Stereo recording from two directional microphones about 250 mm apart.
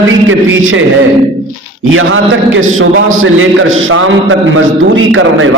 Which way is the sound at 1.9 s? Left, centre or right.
Right.